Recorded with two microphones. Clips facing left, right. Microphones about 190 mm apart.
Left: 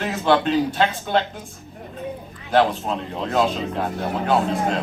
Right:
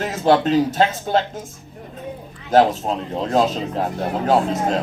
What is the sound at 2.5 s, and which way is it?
Speech, 40° right (ahead or behind).